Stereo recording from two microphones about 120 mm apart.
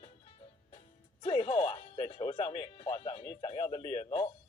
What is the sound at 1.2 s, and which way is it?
Music, 55° left (ahead or behind).